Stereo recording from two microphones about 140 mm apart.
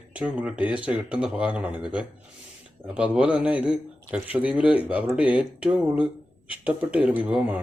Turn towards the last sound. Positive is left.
turn(degrees=-10)  # may be behind; listen again after turning